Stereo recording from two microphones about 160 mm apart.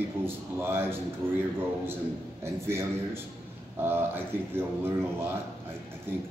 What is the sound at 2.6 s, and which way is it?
A man's voice, 15° right (ahead or behind).